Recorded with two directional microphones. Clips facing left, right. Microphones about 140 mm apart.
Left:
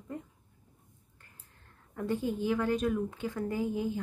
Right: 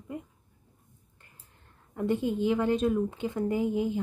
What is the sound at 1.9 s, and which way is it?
A woman's voice, 20° right (ahead or behind).